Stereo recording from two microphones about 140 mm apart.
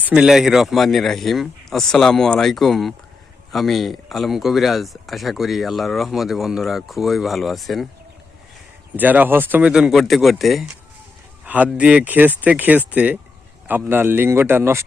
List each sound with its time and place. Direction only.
0.0 s speech: 5° right (ahead or behind)
9.0 s speech: 10° right (ahead or behind)
11.4 s speech: 10° right (ahead or behind)